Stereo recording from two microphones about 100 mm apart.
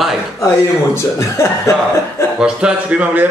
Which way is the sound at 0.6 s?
30° left (ahead or behind).